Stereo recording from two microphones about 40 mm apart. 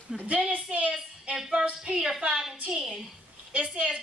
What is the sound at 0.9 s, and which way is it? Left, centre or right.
Speech, right.